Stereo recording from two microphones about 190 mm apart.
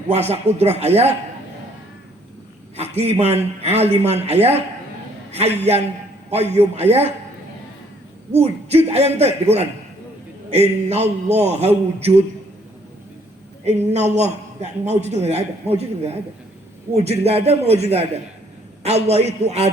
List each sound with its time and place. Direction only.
0.1 s a man's voice: 35° right (ahead or behind)
2.7 s a man's voice: 35° right (ahead or behind)
8.3 s a man's voice: 35° right (ahead or behind)
13.9 s a man's voice: 35° right (ahead or behind)